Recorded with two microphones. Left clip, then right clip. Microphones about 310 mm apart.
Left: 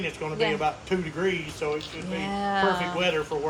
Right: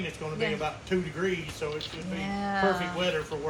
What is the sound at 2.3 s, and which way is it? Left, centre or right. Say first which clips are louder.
Speech: left 3 dB; centre.